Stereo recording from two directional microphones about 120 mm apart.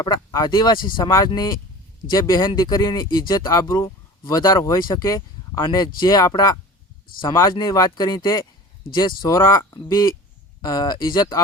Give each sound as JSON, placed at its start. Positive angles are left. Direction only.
{"t": 0.0, "sound": "speech", "side_deg": 35}
{"t": 2.4, "sound": "speech", "side_deg": 40}
{"t": 5.0, "sound": "a sound", "side_deg": 25}
{"t": 5.6, "sound": "speech", "side_deg": 40}
{"t": 7.3, "sound": "speech", "side_deg": 20}
{"t": 9.4, "sound": "speech", "side_deg": 25}